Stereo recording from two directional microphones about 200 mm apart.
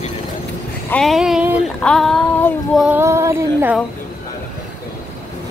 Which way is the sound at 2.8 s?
10° right (ahead or behind).